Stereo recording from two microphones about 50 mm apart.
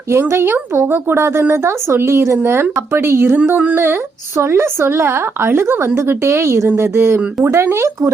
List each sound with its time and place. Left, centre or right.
0.1 s a woman's voice: right
2.4 s a woman's voice: right
3.5 s speech: right
4.4 s a woman's voice: right